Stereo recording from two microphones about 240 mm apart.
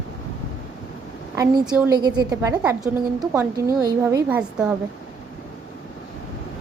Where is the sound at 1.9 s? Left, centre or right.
Centre.